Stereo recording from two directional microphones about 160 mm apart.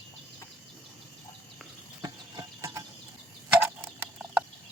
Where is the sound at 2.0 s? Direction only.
20° right (ahead or behind).